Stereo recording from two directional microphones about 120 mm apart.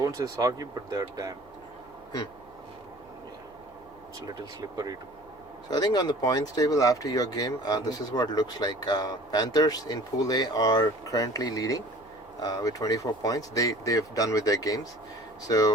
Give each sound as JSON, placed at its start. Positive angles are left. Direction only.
{"t": 0.0, "sound": "speech", "side_deg": -30}
{"t": 5.7, "sound": "speech", "side_deg": 35}